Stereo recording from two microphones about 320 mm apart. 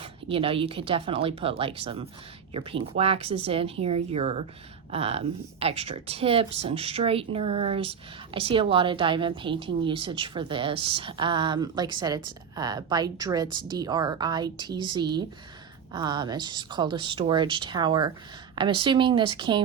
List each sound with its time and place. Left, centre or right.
0.0 s speech: centre